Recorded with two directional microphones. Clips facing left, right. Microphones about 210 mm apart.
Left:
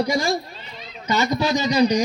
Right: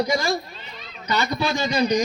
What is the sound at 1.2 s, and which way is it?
Speech, 20° left (ahead or behind).